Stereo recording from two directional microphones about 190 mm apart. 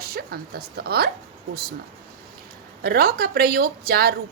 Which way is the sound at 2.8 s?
55° right (ahead or behind).